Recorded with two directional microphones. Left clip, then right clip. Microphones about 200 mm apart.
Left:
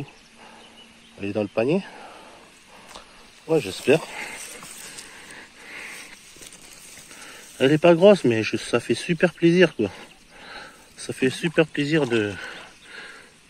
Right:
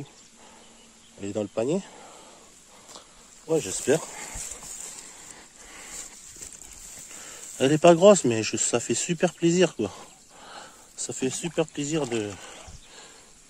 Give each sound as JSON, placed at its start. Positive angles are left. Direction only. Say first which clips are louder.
{"t": 1.2, "sound": "speech", "louder": "left 4 dB", "side_deg": -5}
{"t": 3.8, "sound": "speech", "louder": "left 5 dB", "side_deg": -5}
{"t": 5.3, "sound": "a sound", "louder": "left 7 dB", "side_deg": -10}
{"t": 7.5, "sound": "speech", "louder": "left 1 dB", "side_deg": -25}